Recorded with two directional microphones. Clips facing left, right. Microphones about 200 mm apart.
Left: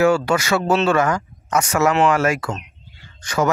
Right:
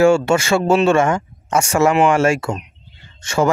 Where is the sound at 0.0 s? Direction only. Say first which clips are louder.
Right 3 dB; 25° right (ahead or behind).